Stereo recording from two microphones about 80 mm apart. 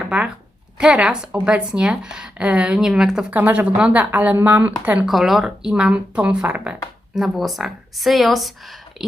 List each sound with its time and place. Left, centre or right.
0.0 s speech: centre
3.3 s speech: right
5.0 s speech: centre
7.2 s a woman's voice: centre